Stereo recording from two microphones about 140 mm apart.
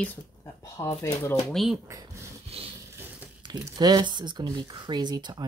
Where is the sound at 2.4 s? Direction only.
45° right (ahead or behind).